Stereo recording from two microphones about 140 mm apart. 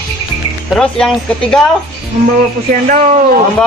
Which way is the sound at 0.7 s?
5° left (ahead or behind).